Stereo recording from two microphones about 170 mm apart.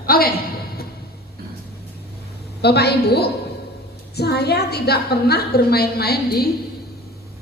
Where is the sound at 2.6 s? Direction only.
70° left (ahead or behind).